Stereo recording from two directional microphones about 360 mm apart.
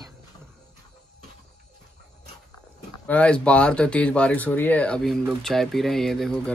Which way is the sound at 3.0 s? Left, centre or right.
Centre.